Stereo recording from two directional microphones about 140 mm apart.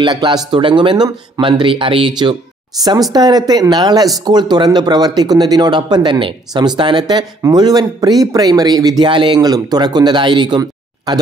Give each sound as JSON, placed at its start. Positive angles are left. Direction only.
{"t": 0.0, "sound": "speech", "side_deg": -30}
{"t": 3.1, "sound": "speech", "side_deg": -30}